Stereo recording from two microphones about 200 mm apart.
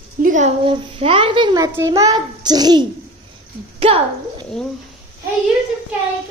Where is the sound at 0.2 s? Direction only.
40° right (ahead or behind).